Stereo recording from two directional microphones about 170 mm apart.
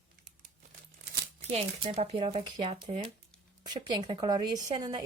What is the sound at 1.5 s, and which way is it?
Speech, 35° right (ahead or behind).